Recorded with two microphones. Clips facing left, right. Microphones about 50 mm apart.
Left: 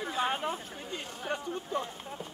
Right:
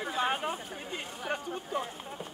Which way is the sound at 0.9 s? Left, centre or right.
Centre.